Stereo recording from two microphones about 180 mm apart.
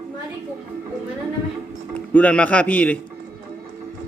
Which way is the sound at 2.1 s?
10° left (ahead or behind).